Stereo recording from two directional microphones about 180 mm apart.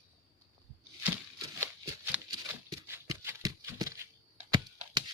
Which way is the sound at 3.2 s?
15° right (ahead or behind).